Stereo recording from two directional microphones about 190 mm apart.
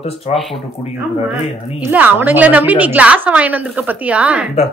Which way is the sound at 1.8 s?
10° right (ahead or behind).